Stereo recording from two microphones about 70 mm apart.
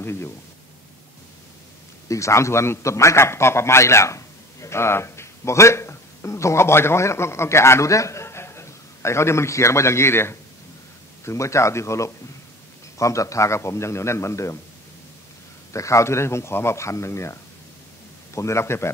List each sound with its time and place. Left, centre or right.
0.0 s speech: left
2.0 s a man's voice: left
15.7 s a man's voice: left